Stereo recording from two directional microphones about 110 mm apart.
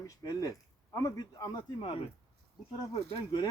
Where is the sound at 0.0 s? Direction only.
30° left (ahead or behind).